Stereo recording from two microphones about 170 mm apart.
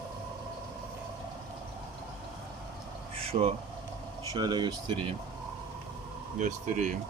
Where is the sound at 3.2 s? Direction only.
35° right (ahead or behind).